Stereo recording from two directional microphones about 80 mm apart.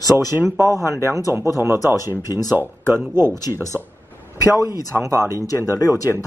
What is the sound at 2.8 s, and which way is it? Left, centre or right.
Speech, right.